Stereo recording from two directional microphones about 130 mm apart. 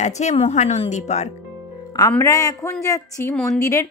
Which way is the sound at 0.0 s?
60° left (ahead or behind).